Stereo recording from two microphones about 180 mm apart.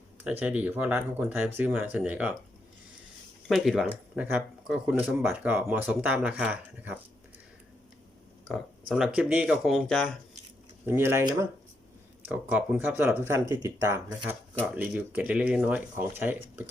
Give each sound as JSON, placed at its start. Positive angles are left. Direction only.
{"t": 0.3, "sound": "speech", "side_deg": -10}
{"t": 3.5, "sound": "speech", "side_deg": 0}
{"t": 8.9, "sound": "speech", "side_deg": -5}
{"t": 10.8, "sound": "speech", "side_deg": -10}